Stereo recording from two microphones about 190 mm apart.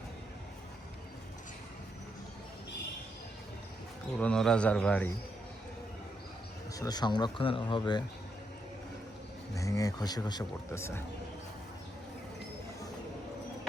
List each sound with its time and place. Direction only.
4.2 s a man's voice: 5° left (ahead or behind)
6.7 s speech: 20° left (ahead or behind)
9.6 s speech: 15° left (ahead or behind)